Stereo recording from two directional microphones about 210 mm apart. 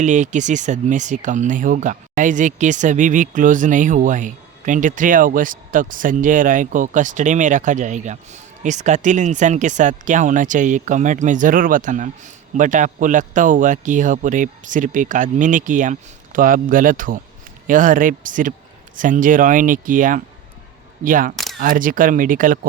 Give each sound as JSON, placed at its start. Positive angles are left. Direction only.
{"t": 0.0, "sound": "speech", "side_deg": -35}
{"t": 21.3, "sound": "camera", "side_deg": 0}
{"t": 21.6, "sound": "speech", "side_deg": -40}